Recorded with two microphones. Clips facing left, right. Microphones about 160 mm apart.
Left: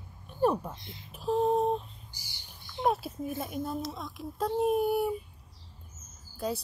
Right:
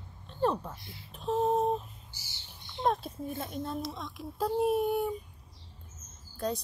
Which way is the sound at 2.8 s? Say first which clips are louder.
Left 1 dB; 5° left (ahead or behind).